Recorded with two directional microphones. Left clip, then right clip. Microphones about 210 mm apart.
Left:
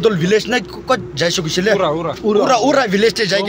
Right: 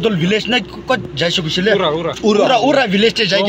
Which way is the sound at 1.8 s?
55° left (ahead or behind).